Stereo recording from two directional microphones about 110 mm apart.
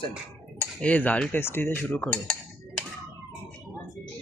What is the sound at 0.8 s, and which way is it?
Cutlery, 15° left (ahead or behind).